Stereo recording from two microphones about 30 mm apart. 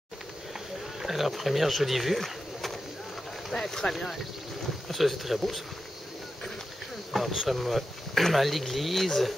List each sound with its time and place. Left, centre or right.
1.0 s speech: centre
2.1 s pigeon: centre
3.5 s speech: centre
4.8 s speech: centre
7.1 s speech: centre